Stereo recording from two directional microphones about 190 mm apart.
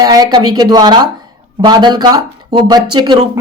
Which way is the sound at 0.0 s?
20° right (ahead or behind).